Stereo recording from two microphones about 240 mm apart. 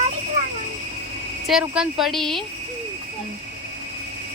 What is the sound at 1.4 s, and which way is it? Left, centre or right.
Speech, centre.